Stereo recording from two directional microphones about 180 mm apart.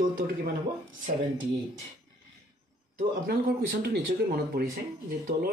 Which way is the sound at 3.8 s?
55° right (ahead or behind).